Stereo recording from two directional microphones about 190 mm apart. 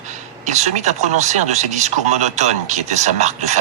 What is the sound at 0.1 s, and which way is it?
Speech, 35° right (ahead or behind).